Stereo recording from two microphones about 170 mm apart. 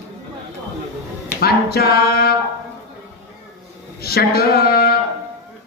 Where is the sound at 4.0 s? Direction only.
65° left (ahead or behind).